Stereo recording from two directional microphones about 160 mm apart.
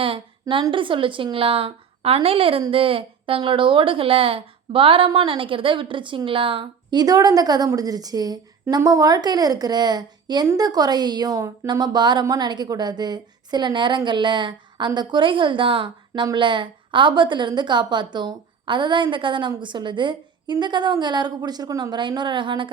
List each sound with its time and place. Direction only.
0.0 s a woman's voice: 35° right (ahead or behind)